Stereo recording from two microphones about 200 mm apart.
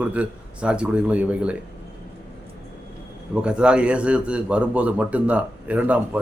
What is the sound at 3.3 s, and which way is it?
Speech, 5° right (ahead or behind).